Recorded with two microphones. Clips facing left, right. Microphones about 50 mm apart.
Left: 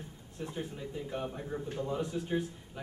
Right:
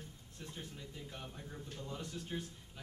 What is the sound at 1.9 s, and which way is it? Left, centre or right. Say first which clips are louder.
Speech: left 10 dB; centre.